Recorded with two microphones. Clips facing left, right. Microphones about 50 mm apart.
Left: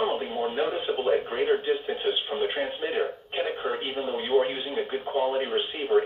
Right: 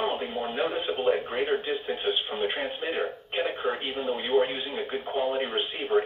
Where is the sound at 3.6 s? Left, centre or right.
Right.